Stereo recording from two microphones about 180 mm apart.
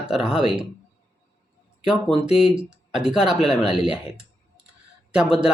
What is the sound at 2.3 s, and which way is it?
Speech, centre (ahead or behind).